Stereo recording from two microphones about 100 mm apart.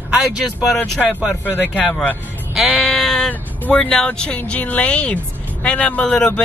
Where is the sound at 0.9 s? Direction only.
15° left (ahead or behind).